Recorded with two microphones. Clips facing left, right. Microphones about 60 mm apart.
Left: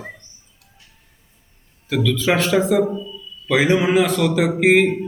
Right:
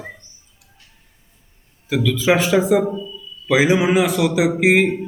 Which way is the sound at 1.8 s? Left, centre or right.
Centre.